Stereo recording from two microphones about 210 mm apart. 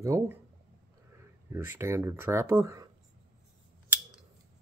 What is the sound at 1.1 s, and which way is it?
Speech, 10° right (ahead or behind).